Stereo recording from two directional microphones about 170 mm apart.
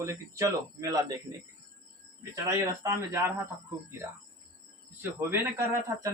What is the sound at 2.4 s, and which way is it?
Speech, 20° right (ahead or behind).